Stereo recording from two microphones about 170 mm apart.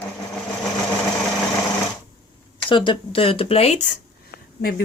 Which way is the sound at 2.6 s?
30° left (ahead or behind).